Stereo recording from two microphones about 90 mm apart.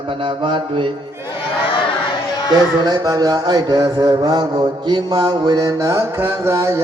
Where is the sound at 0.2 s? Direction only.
65° right (ahead or behind).